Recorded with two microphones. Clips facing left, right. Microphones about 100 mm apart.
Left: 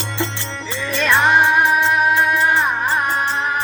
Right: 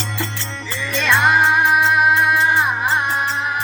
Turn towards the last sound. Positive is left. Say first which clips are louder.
# even
turn(degrees=-5)  # may be behind; listen again after turning